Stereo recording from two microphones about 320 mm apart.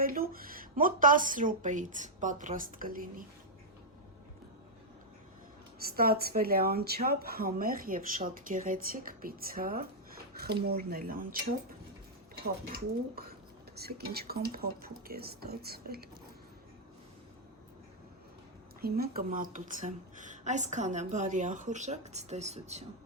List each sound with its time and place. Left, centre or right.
0.0 s speech: right
5.8 s speech: right
13.7 s speech: right
18.8 s speech: right